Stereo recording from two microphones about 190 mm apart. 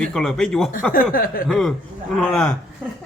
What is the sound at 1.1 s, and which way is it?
Speech, 50° left (ahead or behind).